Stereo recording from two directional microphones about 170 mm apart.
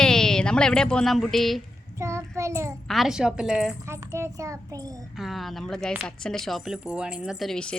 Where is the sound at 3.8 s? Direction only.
15° right (ahead or behind).